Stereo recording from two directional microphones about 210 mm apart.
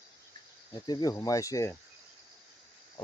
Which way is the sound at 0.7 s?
20° left (ahead or behind).